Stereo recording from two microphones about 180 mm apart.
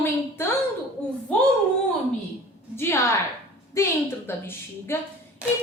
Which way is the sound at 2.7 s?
15° left (ahead or behind).